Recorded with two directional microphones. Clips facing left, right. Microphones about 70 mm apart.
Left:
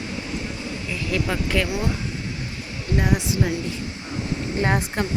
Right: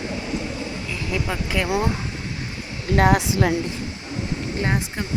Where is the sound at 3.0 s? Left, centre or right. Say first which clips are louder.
Right 5 dB; right.